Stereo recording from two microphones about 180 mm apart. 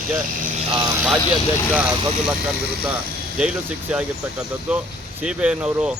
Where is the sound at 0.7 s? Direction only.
25° right (ahead or behind).